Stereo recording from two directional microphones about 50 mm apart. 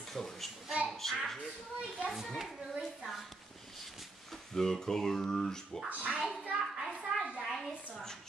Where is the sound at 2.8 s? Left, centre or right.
Centre.